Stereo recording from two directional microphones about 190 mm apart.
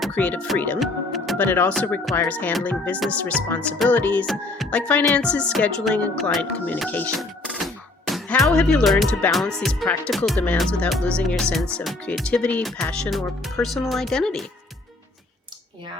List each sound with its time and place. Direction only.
0.0 s speech: 5° left (ahead or behind)
7.4 s a sound: 5° right (ahead or behind)
8.4 s speech: 5° left (ahead or behind)